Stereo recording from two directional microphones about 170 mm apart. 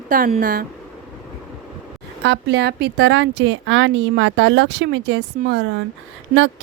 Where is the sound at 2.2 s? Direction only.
90° right.